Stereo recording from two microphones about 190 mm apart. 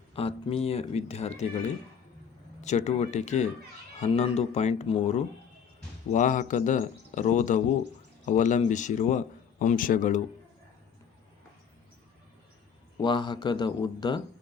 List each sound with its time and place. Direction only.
0.1 s a man's voice: 30° left (ahead or behind)
2.6 s a man's voice: 35° left (ahead or behind)
13.0 s a man's voice: 25° left (ahead or behind)